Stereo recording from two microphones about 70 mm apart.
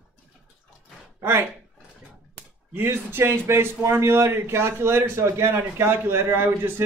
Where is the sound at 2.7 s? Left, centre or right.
Right.